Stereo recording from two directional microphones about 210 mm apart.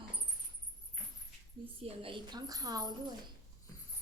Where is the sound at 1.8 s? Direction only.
25° right (ahead or behind).